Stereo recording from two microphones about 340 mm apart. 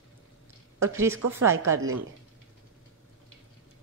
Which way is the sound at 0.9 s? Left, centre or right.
Centre.